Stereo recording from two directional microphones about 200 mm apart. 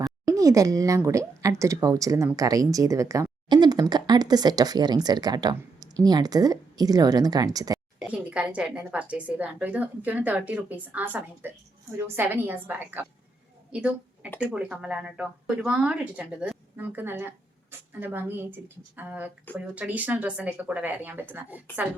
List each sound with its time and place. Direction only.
0.0 s speech: 15° right (ahead or behind)
7.9 s speech: 5° right (ahead or behind)
13.7 s a sound: 5° right (ahead or behind)
14.5 s speech: 5° right (ahead or behind)